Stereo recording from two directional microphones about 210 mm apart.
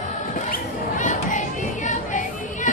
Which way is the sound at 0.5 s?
35° left (ahead or behind).